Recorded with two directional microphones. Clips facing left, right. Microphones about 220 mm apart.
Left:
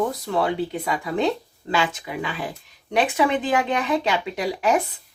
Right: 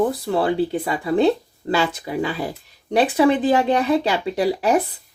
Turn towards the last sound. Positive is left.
turn(degrees=-35)  # may be behind; listen again after turning